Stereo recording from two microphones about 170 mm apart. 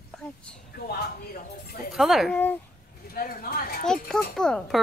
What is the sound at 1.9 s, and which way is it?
Speech, centre (ahead or behind).